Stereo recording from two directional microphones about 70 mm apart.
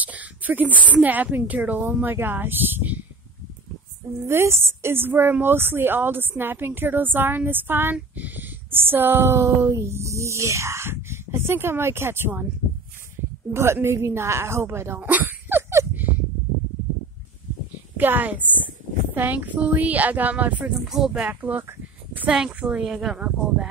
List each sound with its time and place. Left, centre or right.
0.0 s a sound: right
1.0 s speech: right
4.3 s a woman's voice: right
13.5 s a woman's voice: right
15.0 s a sound: right
17.9 s a woman's voice: right
20.8 s speech: centre
21.1 s speech: right
22.6 s speech: centre